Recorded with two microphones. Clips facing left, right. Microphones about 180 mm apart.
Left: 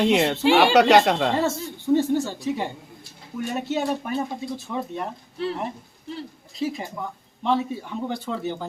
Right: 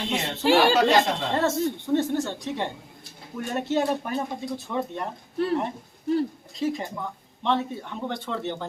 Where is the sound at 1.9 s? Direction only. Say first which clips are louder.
Left 4 dB; 5° left (ahead or behind).